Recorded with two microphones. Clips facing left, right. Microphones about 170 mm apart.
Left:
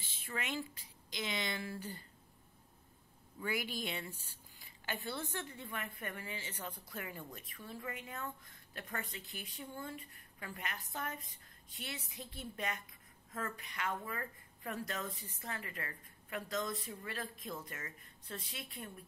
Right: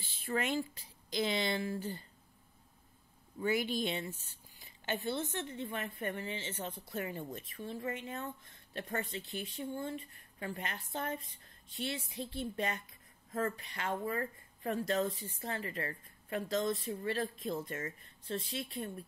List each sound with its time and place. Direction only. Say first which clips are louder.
0.2 s speech: right 7 dB; 35° right (ahead or behind)
3.3 s speech: right 7 dB; 25° right (ahead or behind)